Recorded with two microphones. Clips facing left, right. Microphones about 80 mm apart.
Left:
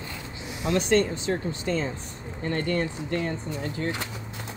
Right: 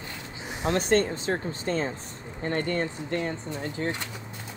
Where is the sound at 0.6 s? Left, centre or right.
Right.